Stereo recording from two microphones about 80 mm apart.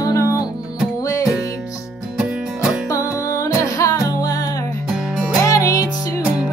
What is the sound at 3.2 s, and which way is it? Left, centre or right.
Music, left.